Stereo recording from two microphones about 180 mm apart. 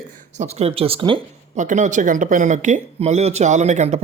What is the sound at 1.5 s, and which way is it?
Speech, 45° right (ahead or behind).